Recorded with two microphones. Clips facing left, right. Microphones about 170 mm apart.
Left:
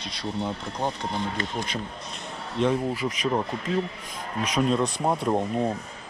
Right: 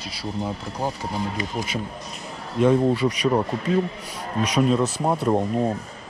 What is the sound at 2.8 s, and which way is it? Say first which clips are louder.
Speech: right 7 dB; 35° right (ahead or behind).